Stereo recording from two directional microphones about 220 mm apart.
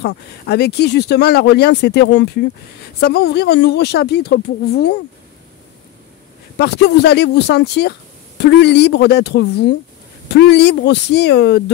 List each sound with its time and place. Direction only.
0.0 s speech: 50° left (ahead or behind)
6.6 s speech: 50° left (ahead or behind)